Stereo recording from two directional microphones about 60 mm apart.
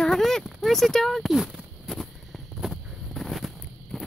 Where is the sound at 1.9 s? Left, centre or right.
Centre.